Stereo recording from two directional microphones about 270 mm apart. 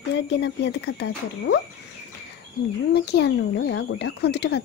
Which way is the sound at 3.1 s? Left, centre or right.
Left.